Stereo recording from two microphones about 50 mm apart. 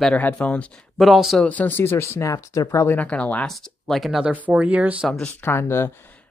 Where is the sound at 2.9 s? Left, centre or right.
Left.